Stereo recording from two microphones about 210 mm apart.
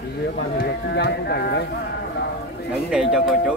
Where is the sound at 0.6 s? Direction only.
50° left (ahead or behind).